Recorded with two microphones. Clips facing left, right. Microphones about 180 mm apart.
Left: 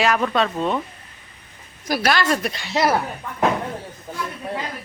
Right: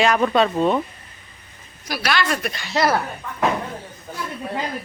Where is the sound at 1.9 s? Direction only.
50° left (ahead or behind).